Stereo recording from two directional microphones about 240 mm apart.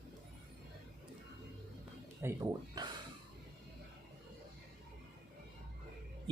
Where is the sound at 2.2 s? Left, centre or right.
Centre.